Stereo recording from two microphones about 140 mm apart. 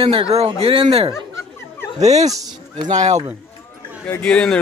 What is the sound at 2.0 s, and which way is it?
Speech, 55° right (ahead or behind).